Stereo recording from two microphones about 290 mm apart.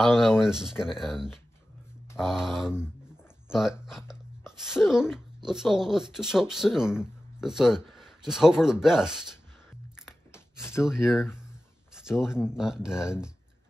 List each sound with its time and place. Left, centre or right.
0.0 s speech: centre
10.0 s a sound: centre
10.9 s speech: centre